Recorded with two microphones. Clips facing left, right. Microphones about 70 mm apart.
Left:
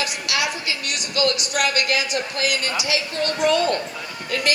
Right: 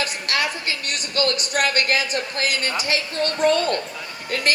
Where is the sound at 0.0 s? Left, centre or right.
Right.